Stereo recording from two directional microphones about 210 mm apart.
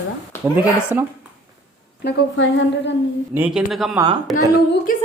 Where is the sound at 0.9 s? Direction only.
10° right (ahead or behind).